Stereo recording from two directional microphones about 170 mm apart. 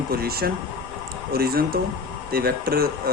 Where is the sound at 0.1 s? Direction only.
65° right (ahead or behind).